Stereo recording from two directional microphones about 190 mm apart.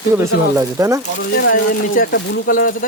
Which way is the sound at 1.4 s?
50° left (ahead or behind).